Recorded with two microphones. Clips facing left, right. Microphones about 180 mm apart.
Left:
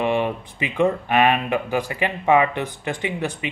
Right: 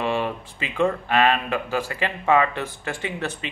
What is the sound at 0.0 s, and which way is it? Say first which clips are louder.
Speech: left 3 dB; 20° left (ahead or behind).